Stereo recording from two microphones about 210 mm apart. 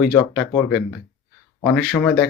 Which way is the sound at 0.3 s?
5° left (ahead or behind).